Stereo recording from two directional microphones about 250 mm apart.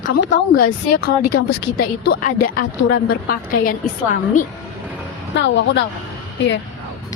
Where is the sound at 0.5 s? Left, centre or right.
Left.